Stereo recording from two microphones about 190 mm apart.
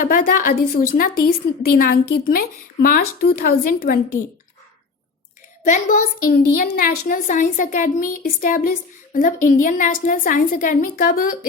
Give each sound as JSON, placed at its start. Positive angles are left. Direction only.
{"t": 0.0, "sound": "a woman's voice", "side_deg": 45}
{"t": 5.6, "sound": "a woman's voice", "side_deg": 40}